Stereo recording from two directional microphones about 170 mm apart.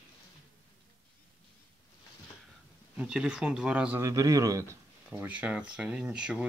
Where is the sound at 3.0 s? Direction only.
5° right (ahead or behind).